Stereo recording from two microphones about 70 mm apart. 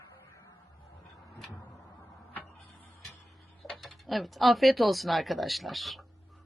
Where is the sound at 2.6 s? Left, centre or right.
Left.